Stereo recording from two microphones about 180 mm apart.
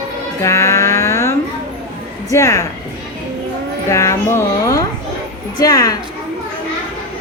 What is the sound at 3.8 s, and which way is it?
A woman's voice, 15° left (ahead or behind).